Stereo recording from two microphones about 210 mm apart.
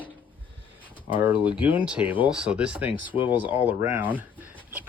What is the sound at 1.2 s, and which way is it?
Speech, 5° right (ahead or behind).